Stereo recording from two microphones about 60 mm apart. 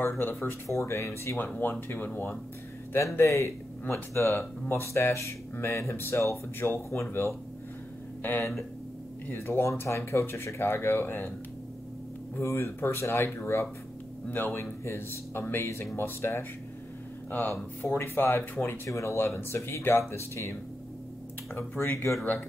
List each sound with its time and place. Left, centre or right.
0.0 s speech: left
1.6 s speech: left
3.2 s speech: left
8.2 s speech: left
9.3 s speech: left
12.4 s speech: left
18.9 s speech: left
19.1 s speech: left
21.5 s speech: left